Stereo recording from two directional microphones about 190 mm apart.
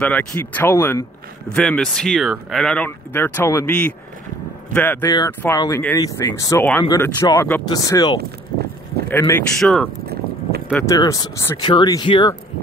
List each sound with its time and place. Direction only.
0.0 s speech: 10° left (ahead or behind)
9.6 s speech: centre (ahead or behind)
10.7 s speech: 15° left (ahead or behind)